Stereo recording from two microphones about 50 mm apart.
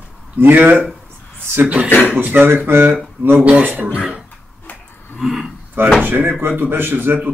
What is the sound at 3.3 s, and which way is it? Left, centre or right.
Speech, right.